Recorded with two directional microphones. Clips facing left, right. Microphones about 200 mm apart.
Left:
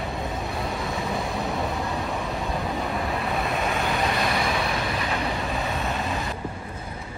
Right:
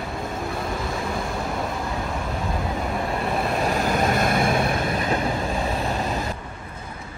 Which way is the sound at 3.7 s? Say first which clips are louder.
Right 3 dB; 40° right (ahead or behind).